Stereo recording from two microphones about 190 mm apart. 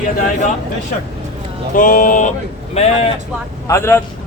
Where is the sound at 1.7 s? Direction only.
45° left (ahead or behind).